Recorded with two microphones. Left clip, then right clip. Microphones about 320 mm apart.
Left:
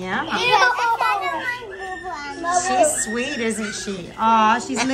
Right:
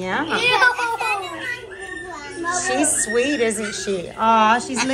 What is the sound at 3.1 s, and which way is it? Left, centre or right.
A woman's voice, centre.